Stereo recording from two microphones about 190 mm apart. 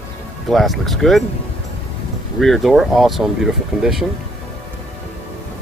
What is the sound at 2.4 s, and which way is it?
Speech, centre (ahead or behind).